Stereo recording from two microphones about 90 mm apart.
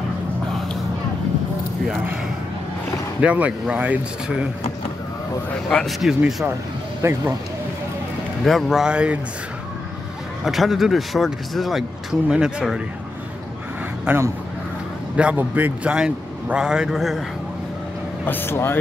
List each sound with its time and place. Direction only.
3.2 s a man's voice: 15° right (ahead or behind)
5.7 s speech: 5° left (ahead or behind)
7.0 s speech: 30° right (ahead or behind)
8.5 s a man's voice: centre (ahead or behind)
10.4 s speech: centre (ahead or behind)
14.0 s speech: 25° right (ahead or behind)
15.1 s a man's voice: 15° right (ahead or behind)
18.2 s speech: 25° left (ahead or behind)